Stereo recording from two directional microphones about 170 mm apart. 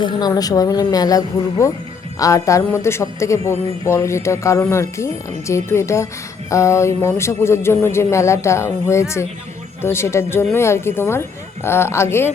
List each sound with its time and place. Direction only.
0.0 s speech: 25° left (ahead or behind)